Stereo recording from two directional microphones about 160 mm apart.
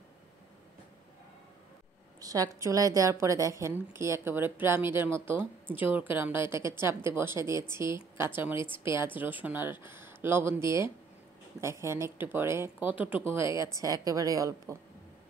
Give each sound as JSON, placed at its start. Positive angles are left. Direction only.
{"t": 2.1, "sound": "a woman's voice", "side_deg": -20}